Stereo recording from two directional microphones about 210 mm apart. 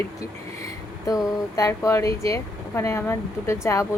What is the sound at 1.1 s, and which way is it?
Speech, 15° left (ahead or behind).